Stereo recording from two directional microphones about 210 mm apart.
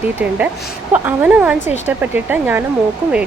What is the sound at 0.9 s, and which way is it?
Speech, 5° right (ahead or behind).